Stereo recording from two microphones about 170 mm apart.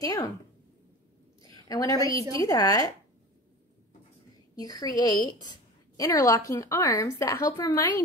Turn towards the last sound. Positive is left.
turn(degrees=20)  # may be behind; listen again after turning